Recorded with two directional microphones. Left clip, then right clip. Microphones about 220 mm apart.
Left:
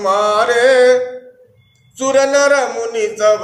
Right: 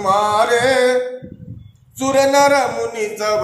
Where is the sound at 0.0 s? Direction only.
10° left (ahead or behind).